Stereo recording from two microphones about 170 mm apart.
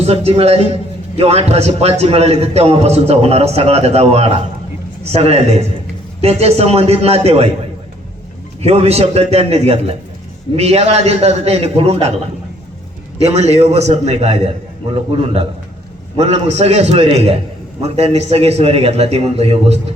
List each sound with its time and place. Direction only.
0.0 s a man's voice: 40° right (ahead or behind)
8.6 s a man's voice: 40° right (ahead or behind)
13.3 s a man's voice: 40° right (ahead or behind)